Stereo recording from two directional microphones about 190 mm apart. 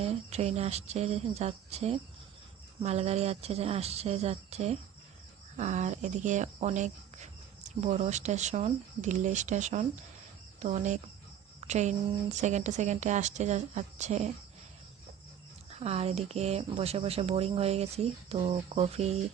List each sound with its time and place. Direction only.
0.0 s speech: 35° right (ahead or behind)
15.7 s speech: 35° right (ahead or behind)